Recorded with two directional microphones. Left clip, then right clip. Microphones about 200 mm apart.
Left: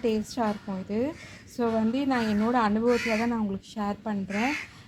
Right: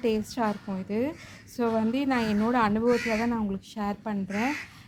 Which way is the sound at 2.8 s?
40° right (ahead or behind).